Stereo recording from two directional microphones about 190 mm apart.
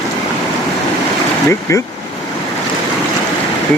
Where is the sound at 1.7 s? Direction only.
15° left (ahead or behind).